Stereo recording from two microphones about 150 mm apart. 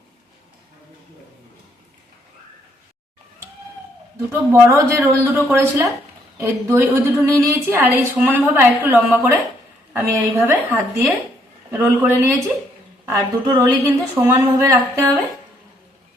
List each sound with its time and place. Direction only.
4.3 s a woman's voice: 15° right (ahead or behind)